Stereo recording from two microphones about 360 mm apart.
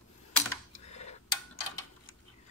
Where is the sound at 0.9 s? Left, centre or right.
Centre.